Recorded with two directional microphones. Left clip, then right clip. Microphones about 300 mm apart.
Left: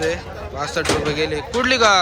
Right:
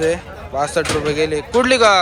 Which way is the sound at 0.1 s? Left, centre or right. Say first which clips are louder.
Right 4 dB; centre.